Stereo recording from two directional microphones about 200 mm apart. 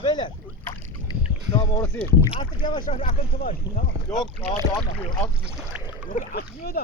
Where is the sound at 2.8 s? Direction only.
40° left (ahead or behind).